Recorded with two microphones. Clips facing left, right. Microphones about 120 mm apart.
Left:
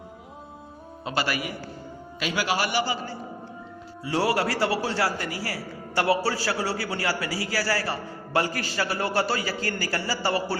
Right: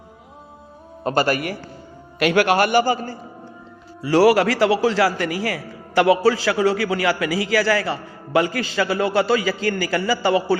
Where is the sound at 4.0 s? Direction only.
90° right.